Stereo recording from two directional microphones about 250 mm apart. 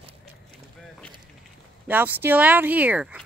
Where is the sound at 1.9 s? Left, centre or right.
Centre.